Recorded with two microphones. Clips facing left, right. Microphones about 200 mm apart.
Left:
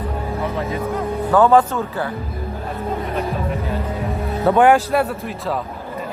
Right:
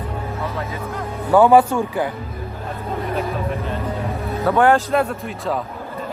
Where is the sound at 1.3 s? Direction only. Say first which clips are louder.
Right 2 dB; 10° right (ahead or behind).